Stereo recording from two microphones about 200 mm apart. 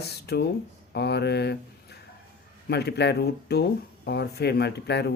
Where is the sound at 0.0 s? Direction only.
55° left (ahead or behind).